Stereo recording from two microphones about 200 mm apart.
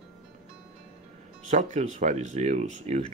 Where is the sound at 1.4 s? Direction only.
40° right (ahead or behind).